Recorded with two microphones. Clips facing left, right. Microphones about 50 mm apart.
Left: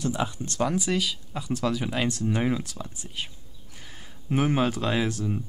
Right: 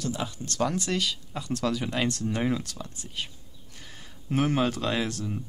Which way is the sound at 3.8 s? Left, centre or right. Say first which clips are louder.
Left 2 dB; centre.